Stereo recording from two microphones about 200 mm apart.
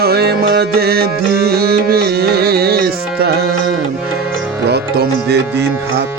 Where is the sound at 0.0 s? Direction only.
50° right (ahead or behind).